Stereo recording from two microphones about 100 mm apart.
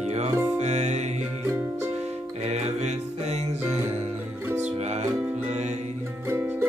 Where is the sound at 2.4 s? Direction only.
90° right.